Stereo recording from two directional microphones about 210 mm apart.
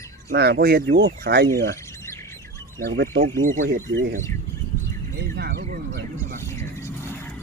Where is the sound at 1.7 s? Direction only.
15° left (ahead or behind).